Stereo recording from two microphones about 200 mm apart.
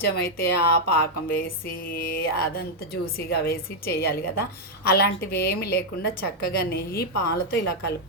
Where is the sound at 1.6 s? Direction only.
50° left (ahead or behind).